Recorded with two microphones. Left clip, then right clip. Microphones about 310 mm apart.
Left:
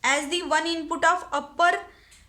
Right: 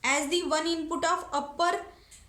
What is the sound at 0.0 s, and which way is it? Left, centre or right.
A woman's voice, left.